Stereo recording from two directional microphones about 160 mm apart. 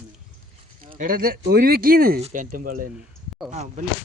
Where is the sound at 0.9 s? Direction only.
65° right (ahead or behind).